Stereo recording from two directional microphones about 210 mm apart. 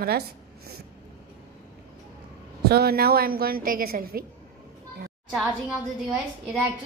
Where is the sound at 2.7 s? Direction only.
50° right (ahead or behind).